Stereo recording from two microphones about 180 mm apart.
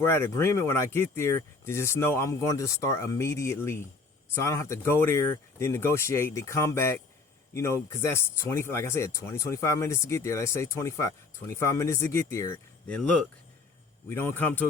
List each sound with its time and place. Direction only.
0.0 s speech: 15° left (ahead or behind)
13.0 s speech: 5° left (ahead or behind)